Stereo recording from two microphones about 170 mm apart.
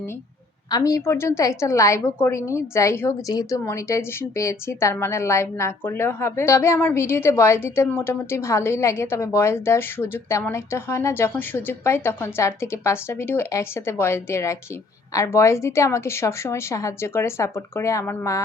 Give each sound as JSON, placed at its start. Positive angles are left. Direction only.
{"t": 0.7, "sound": "a woman's voice", "side_deg": 20}